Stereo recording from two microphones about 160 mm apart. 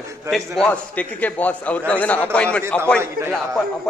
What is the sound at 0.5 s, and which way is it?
A man's voice, 10° left (ahead or behind).